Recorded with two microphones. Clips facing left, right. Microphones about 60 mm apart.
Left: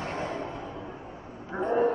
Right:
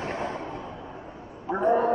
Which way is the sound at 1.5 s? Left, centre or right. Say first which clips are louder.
Right 5 dB; centre.